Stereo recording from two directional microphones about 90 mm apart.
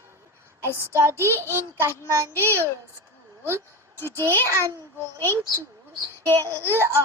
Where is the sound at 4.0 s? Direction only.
25° left (ahead or behind).